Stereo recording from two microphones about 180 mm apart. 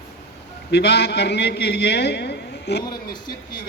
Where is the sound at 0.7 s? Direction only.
70° left (ahead or behind).